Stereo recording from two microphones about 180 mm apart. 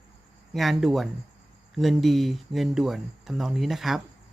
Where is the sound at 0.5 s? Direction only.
Centre (ahead or behind).